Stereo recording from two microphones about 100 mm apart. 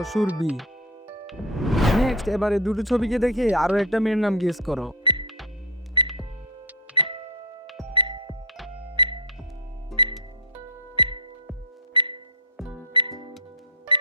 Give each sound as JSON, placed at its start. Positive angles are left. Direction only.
{"t": 0.0, "sound": "speech", "side_deg": 0}
{"t": 1.3, "sound": "speech", "side_deg": 0}
{"t": 6.0, "sound": "cash register", "side_deg": -50}
{"t": 6.9, "sound": "music", "side_deg": -60}
{"t": 11.9, "sound": "a sound", "side_deg": -55}
{"t": 12.5, "sound": "music", "side_deg": -5}
{"t": 12.9, "sound": "music", "side_deg": -55}